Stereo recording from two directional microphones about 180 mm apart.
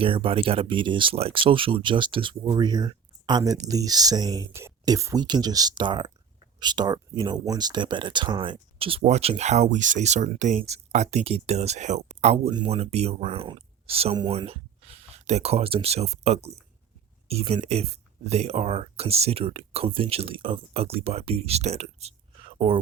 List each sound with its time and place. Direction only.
0.0 s speech: 30° right (ahead or behind)